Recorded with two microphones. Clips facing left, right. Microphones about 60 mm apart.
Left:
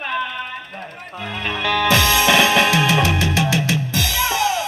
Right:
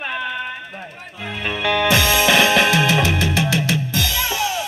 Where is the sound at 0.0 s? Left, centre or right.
Centre.